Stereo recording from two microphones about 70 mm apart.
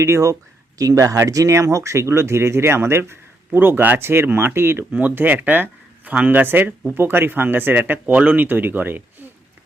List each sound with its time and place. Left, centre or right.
0.0 s speech: right
0.8 s speech: right